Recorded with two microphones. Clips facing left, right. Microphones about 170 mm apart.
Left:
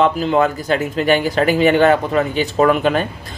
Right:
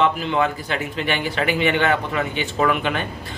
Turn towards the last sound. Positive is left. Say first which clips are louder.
# left 6 dB
turn(degrees=40)  # may be behind; listen again after turning